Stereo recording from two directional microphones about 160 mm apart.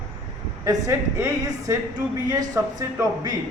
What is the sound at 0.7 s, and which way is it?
Speech, 20° right (ahead or behind).